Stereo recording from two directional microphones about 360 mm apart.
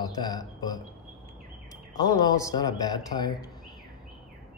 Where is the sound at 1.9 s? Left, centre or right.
Centre.